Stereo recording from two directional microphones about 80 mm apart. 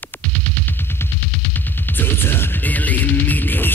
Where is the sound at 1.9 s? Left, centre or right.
Left.